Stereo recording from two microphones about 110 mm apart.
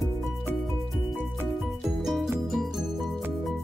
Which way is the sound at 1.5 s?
Centre (ahead or behind).